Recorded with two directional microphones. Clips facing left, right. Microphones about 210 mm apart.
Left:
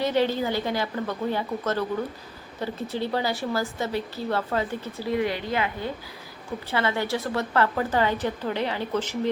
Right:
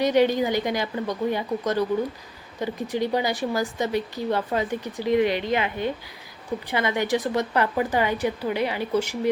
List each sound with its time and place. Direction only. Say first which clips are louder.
0.0 s a woman's voice: right 4 dB; 15° right (ahead or behind)